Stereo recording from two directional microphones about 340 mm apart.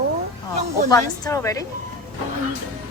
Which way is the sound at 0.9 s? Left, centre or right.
Centre.